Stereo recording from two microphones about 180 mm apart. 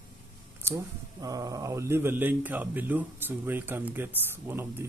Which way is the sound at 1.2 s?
20° right (ahead or behind).